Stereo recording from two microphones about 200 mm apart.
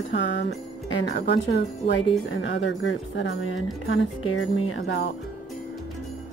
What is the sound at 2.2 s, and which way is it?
Speech, 70° left (ahead or behind).